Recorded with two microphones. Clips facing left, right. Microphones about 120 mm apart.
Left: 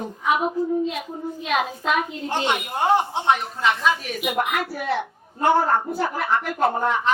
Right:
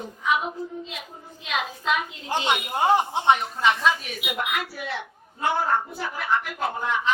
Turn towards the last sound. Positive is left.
turn(degrees=45)  # may be behind; listen again after turning